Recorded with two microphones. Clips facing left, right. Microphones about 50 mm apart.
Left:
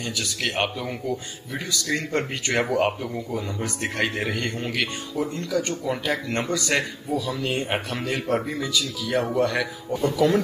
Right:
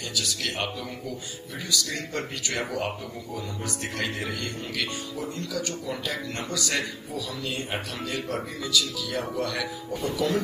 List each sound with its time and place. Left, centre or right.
0.1 s a man's voice: left
10.0 s speech: left